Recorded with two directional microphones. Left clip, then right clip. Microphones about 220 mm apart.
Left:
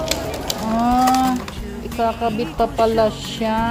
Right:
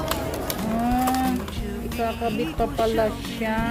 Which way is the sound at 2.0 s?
Centre (ahead or behind).